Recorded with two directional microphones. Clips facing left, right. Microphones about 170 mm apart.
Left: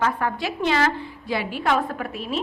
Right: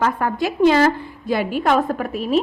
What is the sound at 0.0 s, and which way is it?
A woman's voice, 45° right (ahead or behind).